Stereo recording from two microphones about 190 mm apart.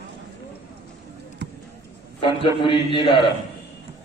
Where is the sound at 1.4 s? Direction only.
60° right (ahead or behind).